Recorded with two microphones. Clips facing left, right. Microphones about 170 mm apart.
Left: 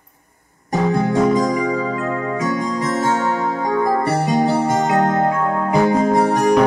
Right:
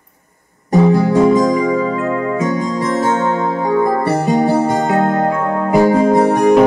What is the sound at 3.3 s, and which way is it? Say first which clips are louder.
Music: right 4 dB; 25° right (ahead or behind).